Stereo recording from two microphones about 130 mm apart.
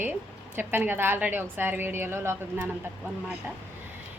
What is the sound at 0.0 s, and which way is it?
A woman's voice, 15° right (ahead or behind).